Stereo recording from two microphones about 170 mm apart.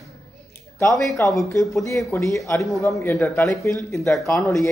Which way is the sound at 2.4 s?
20° left (ahead or behind).